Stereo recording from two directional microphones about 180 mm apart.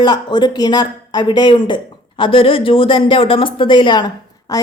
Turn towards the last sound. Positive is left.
turn(degrees=20)  # may be behind; listen again after turning